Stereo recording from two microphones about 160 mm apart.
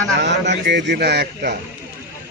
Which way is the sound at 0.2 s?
90° right.